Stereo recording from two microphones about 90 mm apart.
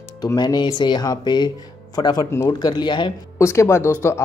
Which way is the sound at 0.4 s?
55° left (ahead or behind).